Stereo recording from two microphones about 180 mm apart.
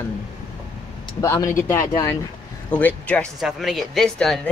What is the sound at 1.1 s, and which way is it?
Speech, 20° left (ahead or behind).